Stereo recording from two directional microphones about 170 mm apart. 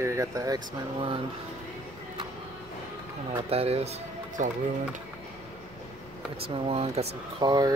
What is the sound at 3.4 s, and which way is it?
Speech, 35° right (ahead or behind).